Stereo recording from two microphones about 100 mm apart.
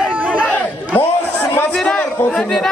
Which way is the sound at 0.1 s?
15° right (ahead or behind).